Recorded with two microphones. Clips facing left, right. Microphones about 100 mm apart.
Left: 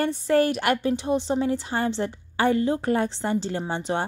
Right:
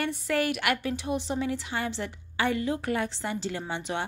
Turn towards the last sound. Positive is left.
turn(degrees=35)  # may be behind; listen again after turning